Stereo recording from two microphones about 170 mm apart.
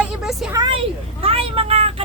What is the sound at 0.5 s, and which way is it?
Speech, 25° right (ahead or behind).